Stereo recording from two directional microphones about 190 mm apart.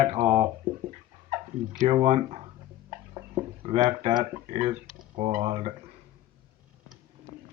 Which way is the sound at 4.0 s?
30° right (ahead or behind).